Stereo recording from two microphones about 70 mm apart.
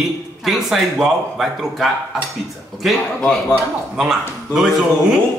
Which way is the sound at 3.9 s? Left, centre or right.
Centre.